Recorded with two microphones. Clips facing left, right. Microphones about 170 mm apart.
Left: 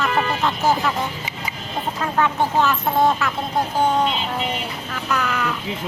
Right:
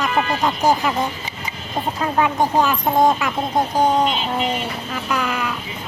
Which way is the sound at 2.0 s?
15° right (ahead or behind).